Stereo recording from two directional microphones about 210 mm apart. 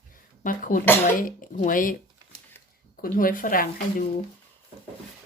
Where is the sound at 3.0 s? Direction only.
40° left (ahead or behind).